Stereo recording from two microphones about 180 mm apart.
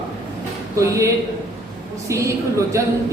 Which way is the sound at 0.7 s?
15° right (ahead or behind).